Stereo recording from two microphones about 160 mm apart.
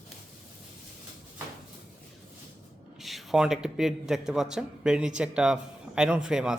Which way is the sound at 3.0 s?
Centre (ahead or behind).